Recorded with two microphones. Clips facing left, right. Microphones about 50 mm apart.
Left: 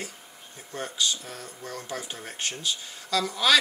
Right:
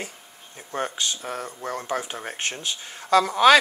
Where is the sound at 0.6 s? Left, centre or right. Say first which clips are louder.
Right 3 dB; right.